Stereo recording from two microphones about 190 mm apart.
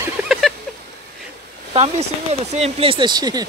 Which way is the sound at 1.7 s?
35° right (ahead or behind).